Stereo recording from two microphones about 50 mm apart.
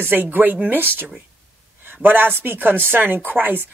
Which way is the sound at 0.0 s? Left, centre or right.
Right.